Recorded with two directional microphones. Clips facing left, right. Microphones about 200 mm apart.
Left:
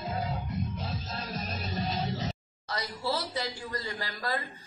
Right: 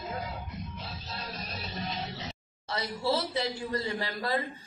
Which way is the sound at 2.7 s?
25° right (ahead or behind).